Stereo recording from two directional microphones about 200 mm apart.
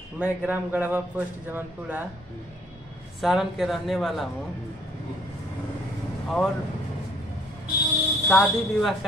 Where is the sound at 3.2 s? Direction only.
Centre (ahead or behind).